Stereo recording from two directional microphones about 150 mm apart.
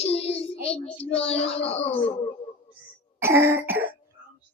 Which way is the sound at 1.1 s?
40° left (ahead or behind).